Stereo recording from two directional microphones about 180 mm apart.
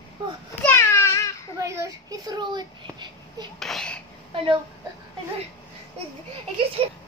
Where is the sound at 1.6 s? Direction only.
15° right (ahead or behind).